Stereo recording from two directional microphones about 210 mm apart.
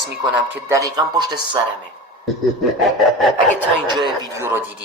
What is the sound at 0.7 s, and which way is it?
Speech, 15° right (ahead or behind).